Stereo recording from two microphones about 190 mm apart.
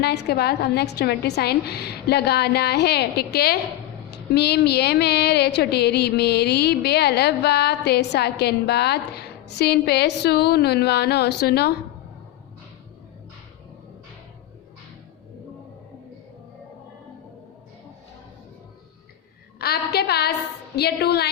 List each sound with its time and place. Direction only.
0.0 s a woman's voice: 60° left (ahead or behind)
19.5 s a woman's voice: 55° left (ahead or behind)